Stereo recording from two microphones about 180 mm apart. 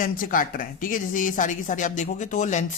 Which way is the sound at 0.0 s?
50° left (ahead or behind).